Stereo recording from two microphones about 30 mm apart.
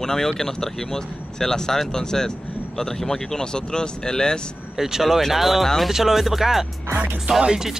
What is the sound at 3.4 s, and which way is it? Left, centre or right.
Speech, left.